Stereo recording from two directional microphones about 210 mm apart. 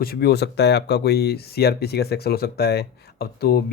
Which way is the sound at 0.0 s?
45° left (ahead or behind).